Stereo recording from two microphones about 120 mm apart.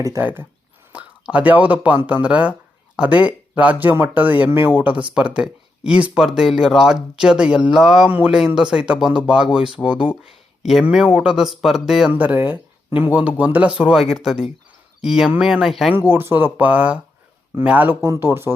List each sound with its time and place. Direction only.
0.2 s speech: 15° right (ahead or behind)
12.1 s speech: 15° right (ahead or behind)
16.0 s speech: 20° right (ahead or behind)